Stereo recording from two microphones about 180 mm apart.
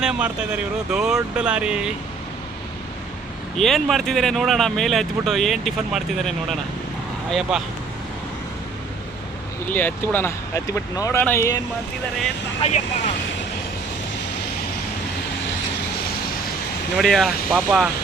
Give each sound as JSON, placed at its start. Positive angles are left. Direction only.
{"t": 0.0, "sound": "speech", "side_deg": -5}
{"t": 3.6, "sound": "speech", "side_deg": 0}
{"t": 9.6, "sound": "speech", "side_deg": 10}
{"t": 12.6, "sound": "speech", "side_deg": 35}
{"t": 17.0, "sound": "speech", "side_deg": 0}